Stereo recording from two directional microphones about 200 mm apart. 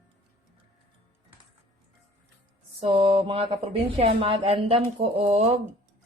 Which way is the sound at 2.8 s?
25° right (ahead or behind).